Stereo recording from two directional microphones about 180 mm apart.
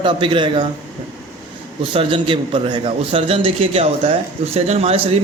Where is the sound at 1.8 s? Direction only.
30° right (ahead or behind).